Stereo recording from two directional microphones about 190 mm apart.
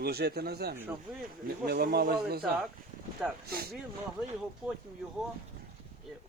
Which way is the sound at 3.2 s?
5° right (ahead or behind).